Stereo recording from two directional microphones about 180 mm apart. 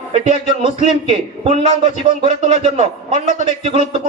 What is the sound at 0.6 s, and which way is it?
Speech, 40° left (ahead or behind).